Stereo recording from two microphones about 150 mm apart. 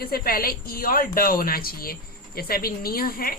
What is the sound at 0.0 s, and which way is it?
Speech, 80° left.